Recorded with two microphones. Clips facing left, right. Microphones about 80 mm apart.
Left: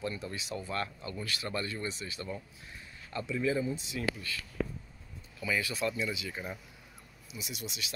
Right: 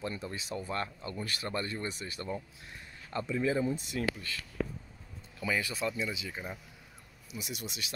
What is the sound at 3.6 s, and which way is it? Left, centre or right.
Speech, right.